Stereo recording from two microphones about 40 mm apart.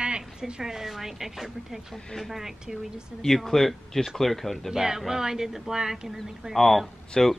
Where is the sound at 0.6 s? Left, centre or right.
Centre.